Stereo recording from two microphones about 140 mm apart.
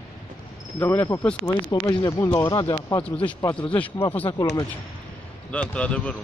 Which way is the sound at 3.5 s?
10° left (ahead or behind).